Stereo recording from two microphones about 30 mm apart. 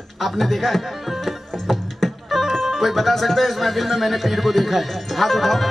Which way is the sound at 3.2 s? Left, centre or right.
Centre.